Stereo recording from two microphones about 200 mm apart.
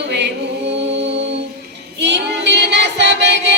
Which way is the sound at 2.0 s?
60° right (ahead or behind).